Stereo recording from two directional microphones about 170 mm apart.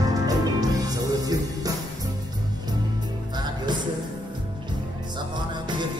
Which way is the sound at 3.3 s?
25° right (ahead or behind).